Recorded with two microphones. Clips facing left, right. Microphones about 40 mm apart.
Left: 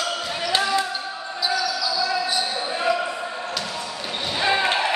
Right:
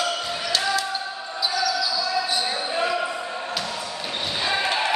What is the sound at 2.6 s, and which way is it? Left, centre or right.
Basketball bounce, centre.